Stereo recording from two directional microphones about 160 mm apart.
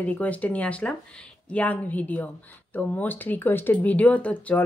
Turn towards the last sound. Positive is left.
turn(degrees=10)  # may be behind; listen again after turning